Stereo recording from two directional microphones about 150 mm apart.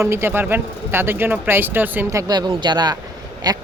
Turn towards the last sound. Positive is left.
turn(degrees=-25)  # may be behind; listen again after turning